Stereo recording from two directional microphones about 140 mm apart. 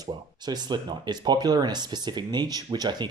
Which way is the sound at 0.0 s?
30° right (ahead or behind).